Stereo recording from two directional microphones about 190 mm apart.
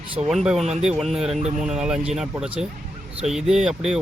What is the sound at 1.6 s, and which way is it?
Speech, 5° right (ahead or behind).